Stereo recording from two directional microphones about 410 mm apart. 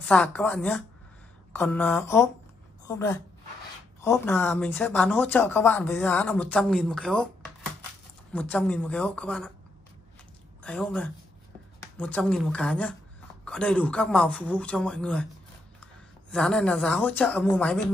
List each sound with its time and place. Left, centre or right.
0.0 s speech: centre
8.3 s speech: centre
10.6 s a woman's voice: centre
16.3 s speech: centre